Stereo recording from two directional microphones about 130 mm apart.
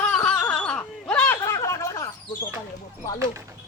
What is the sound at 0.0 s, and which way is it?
Wail, 10° left (ahead or behind).